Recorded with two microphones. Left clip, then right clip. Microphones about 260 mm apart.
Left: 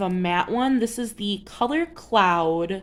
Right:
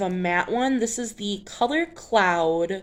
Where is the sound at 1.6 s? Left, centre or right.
Left.